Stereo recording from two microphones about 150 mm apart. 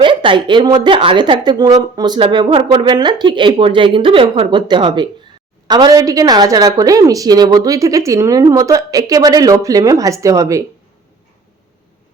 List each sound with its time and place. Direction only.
0.0 s a woman's voice: 35° right (ahead or behind)